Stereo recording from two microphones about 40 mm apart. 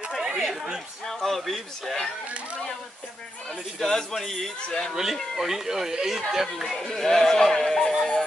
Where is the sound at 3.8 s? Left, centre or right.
Centre.